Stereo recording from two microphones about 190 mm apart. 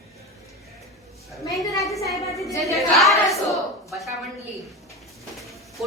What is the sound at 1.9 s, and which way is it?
Speech, 15° left (ahead or behind).